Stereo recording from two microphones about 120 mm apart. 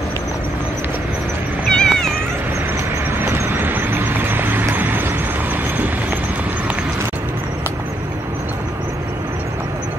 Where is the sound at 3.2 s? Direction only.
20° right (ahead or behind).